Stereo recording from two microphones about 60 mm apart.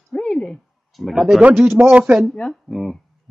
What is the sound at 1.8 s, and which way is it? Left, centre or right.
Speech, right.